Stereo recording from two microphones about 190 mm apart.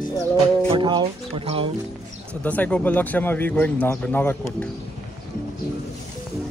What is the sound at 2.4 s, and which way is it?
Speech, 10° left (ahead or behind).